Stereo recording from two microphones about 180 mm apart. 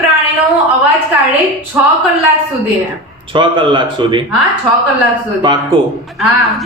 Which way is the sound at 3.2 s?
25° right (ahead or behind).